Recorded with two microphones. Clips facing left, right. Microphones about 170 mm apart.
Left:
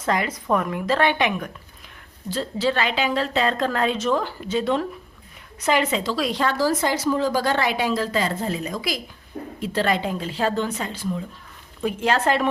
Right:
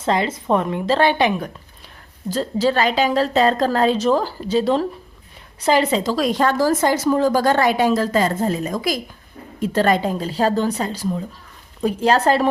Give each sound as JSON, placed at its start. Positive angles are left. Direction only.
{"t": 0.0, "sound": "a woman's voice", "side_deg": -25}